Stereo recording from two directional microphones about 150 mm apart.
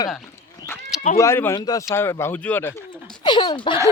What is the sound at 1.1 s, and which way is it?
Speech, 15° left (ahead or behind).